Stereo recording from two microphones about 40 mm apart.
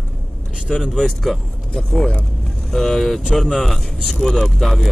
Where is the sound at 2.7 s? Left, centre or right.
Centre.